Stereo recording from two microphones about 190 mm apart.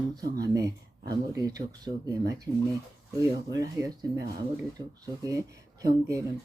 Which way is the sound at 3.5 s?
20° right (ahead or behind).